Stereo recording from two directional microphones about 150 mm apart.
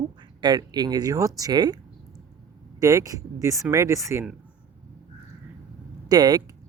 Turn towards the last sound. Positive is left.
turn(degrees=-25)  # may be behind; listen again after turning